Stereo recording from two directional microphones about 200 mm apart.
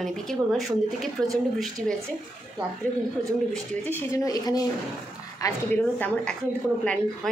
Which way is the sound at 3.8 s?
15° left (ahead or behind).